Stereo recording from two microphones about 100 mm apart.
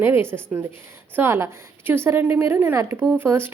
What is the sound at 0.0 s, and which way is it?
A woman's voice, 25° right (ahead or behind).